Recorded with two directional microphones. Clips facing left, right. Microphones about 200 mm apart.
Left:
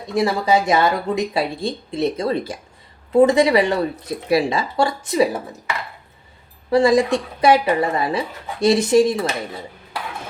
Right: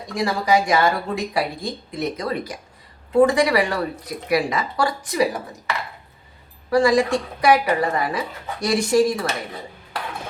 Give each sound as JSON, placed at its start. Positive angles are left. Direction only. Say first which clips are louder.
{"t": 0.1, "sound": "speech", "louder": "left 2 dB", "side_deg": 25}
{"t": 6.7, "sound": "speech", "louder": "left 2 dB", "side_deg": 25}